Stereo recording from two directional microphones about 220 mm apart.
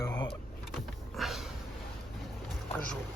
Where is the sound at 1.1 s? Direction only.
Centre (ahead or behind).